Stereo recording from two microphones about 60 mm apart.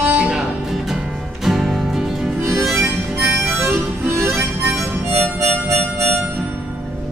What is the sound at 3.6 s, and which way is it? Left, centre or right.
Harmonica, right.